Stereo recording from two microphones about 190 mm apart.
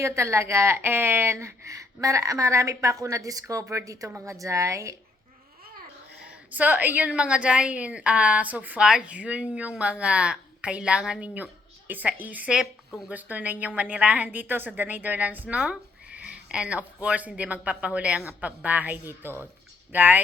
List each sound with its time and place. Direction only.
0.0 s a woman's voice: 15° right (ahead or behind)
6.5 s a woman's voice: 10° right (ahead or behind)